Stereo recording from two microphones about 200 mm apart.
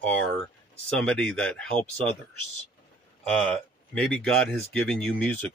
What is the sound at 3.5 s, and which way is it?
Speech, 5° left (ahead or behind).